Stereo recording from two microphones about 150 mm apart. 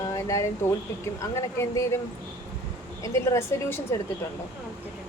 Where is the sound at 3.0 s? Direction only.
20° left (ahead or behind).